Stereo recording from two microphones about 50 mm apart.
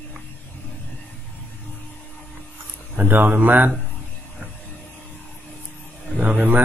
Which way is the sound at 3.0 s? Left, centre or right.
Right.